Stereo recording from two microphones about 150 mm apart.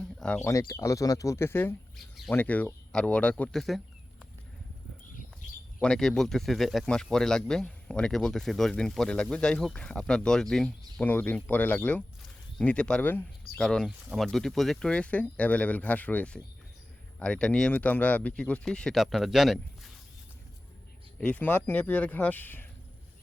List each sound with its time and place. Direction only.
0.0 s a sound: 5° left (ahead or behind)
0.7 s speech: 20° left (ahead or behind)
2.0 s speech: centre (ahead or behind)
2.3 s speech: 10° left (ahead or behind)
5.8 s speech: 5° left (ahead or behind)
21.2 s speech: 10° left (ahead or behind)